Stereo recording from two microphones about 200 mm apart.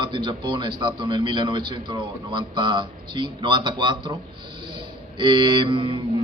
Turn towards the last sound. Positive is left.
turn(degrees=-25)  # may be behind; listen again after turning